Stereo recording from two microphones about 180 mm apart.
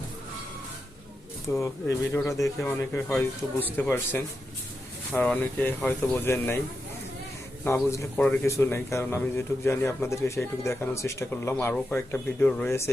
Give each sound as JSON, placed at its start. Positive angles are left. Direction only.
{"t": 1.5, "sound": "speech", "side_deg": 15}
{"t": 7.6, "sound": "speech", "side_deg": 15}